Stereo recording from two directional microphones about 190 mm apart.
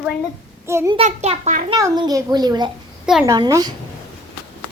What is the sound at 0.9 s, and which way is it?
Speech, 35° right (ahead or behind).